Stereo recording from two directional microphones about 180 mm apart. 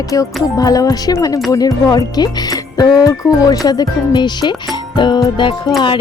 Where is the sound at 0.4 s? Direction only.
20° left (ahead or behind).